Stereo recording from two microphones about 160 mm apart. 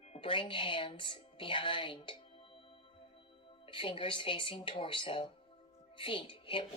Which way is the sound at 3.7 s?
30° left (ahead or behind).